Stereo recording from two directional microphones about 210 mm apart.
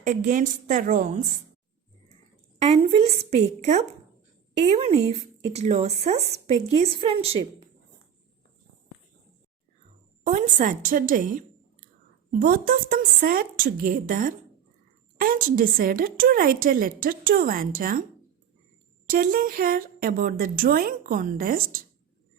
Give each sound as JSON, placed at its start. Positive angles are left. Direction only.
{"t": 0.0, "sound": "speech", "side_deg": -35}
{"t": 2.6, "sound": "speech", "side_deg": -30}
{"t": 10.6, "sound": "a woman's voice", "side_deg": -40}
{"t": 19.0, "sound": "a woman's voice", "side_deg": -40}